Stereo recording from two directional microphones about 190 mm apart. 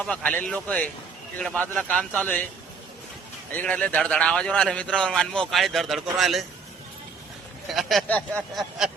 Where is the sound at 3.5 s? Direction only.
5° left (ahead or behind).